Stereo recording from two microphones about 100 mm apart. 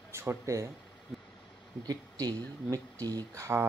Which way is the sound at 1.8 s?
40° right (ahead or behind).